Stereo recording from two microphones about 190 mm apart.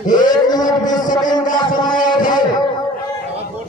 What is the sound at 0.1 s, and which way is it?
Speech, 20° left (ahead or behind).